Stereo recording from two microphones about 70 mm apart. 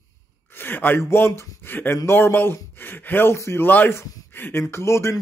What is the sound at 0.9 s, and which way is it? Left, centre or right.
Speech, left.